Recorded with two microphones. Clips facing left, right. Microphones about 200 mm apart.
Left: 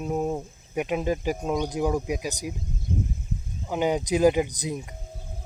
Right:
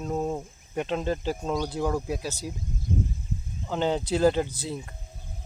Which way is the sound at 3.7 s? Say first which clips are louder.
Left 2 dB; 10° left (ahead or behind).